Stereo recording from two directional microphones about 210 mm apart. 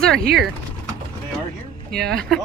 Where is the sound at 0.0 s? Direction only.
5° left (ahead or behind).